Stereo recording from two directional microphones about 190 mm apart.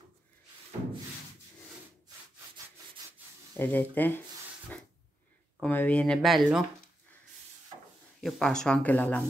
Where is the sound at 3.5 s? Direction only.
10° left (ahead or behind).